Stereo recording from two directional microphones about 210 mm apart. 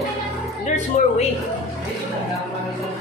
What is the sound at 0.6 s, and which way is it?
Speech, 35° left (ahead or behind).